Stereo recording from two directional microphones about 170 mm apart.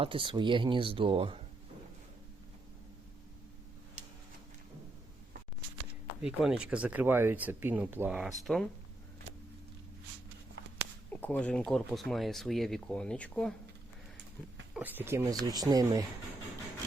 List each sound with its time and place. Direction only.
0.0 s speech: 30° right (ahead or behind)
4.0 s a sound: 40° right (ahead or behind)
6.2 s speech: 5° right (ahead or behind)
11.1 s speech: 10° left (ahead or behind)
14.7 s speech: 10° right (ahead or behind)